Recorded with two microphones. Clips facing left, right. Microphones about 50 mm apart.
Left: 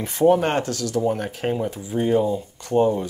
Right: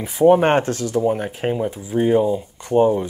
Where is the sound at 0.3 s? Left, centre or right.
Right.